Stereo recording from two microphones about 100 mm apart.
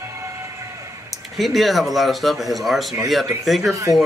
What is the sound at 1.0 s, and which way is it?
Speech, centre (ahead or behind).